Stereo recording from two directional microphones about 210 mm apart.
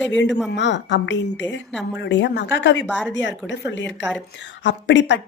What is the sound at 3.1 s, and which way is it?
A woman's voice, 60° left (ahead or behind).